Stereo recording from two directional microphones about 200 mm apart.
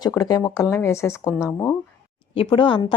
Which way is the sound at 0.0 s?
20° left (ahead or behind).